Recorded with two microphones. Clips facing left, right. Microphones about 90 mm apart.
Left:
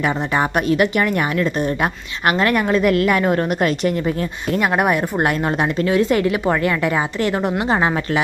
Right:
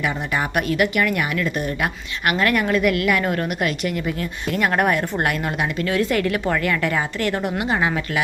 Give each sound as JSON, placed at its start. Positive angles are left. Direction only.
{"t": 0.0, "sound": "speech", "side_deg": 30}
{"t": 4.7, "sound": "a woman's voice", "side_deg": 15}
{"t": 7.6, "sound": "speech", "side_deg": 30}